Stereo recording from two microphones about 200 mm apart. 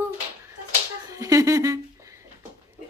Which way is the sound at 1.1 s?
15° right (ahead or behind).